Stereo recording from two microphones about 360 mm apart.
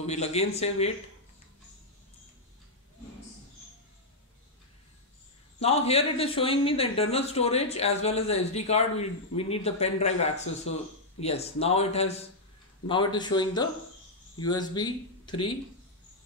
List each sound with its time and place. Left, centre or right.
0.0 s speech: centre
5.6 s speech: centre